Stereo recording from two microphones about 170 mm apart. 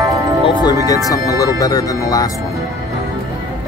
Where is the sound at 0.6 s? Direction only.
20° left (ahead or behind).